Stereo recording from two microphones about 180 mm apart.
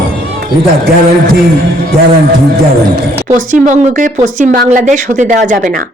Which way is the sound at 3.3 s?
45° right (ahead or behind).